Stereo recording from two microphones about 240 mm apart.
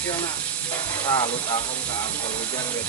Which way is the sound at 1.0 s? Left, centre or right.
Centre.